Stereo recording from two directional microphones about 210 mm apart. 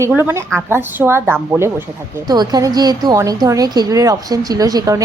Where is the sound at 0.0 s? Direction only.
10° right (ahead or behind).